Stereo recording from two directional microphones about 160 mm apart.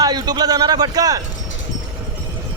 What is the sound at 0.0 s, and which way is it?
Speech, 25° right (ahead or behind).